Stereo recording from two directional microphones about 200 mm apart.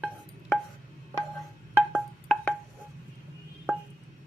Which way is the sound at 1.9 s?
5° left (ahead or behind).